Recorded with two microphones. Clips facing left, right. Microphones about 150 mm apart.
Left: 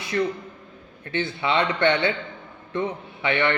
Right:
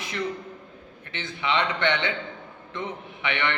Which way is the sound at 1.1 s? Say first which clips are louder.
Left 4 dB; 35° left (ahead or behind).